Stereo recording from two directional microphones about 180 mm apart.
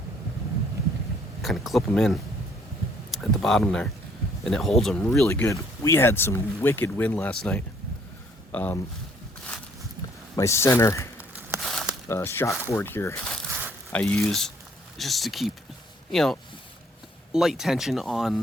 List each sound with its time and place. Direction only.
1.4 s speech: centre (ahead or behind)
5.2 s speech: 15° left (ahead or behind)
10.3 s speech: 15° left (ahead or behind)
11.6 s a sound: centre (ahead or behind)
12.0 s speech: 15° left (ahead or behind)
13.5 s a sound: 15° right (ahead or behind)
13.9 s speech: 10° left (ahead or behind)